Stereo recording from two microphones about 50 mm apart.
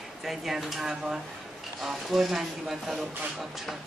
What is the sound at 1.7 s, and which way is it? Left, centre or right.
Speech, centre.